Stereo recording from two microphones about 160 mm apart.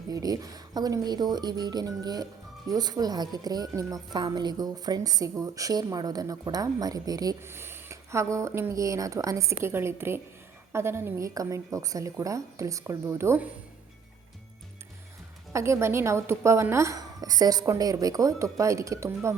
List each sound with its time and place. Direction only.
0.1 s a woman's voice: 25° right (ahead or behind)
15.5 s a woman's voice: 15° right (ahead or behind)